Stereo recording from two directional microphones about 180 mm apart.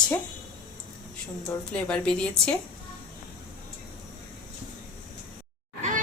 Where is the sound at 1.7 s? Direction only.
5° left (ahead or behind).